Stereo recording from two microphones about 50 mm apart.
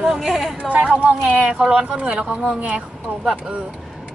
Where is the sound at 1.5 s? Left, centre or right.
Centre.